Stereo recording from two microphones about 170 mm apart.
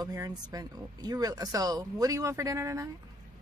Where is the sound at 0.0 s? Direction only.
20° right (ahead or behind).